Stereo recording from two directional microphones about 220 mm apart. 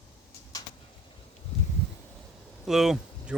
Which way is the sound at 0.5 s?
15° left (ahead or behind).